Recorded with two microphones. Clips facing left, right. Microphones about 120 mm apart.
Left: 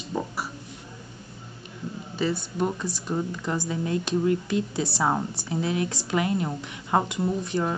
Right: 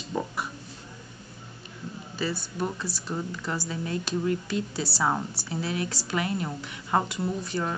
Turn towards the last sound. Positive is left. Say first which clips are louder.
# left 3 dB
turn(degrees=20)  # may be behind; listen again after turning